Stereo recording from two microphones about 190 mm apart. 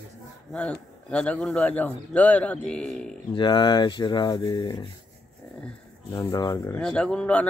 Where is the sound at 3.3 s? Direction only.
25° left (ahead or behind).